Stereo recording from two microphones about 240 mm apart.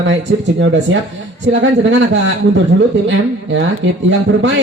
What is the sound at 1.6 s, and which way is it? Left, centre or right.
Speech, right.